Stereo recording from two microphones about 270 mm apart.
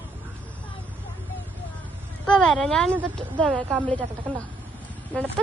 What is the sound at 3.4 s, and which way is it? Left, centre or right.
A woman's voice, centre.